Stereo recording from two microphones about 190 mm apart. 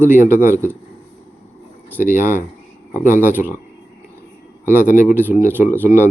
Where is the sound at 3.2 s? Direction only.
10° right (ahead or behind).